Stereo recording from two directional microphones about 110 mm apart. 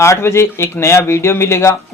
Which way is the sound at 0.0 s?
25° left (ahead or behind).